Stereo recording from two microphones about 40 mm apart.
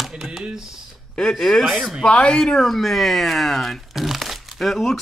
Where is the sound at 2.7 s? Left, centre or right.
Centre.